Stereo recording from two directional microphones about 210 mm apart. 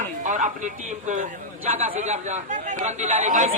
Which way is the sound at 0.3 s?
35° right (ahead or behind).